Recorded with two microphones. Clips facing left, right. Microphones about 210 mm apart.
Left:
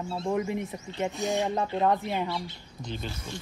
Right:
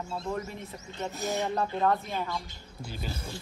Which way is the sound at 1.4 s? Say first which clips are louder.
Left 1 dB; 15° left (ahead or behind).